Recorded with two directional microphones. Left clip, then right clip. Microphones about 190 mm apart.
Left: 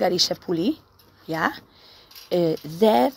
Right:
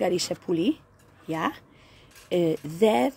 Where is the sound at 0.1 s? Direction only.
5° right (ahead or behind).